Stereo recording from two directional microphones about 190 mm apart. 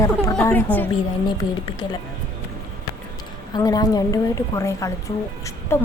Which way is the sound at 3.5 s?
20° left (ahead or behind).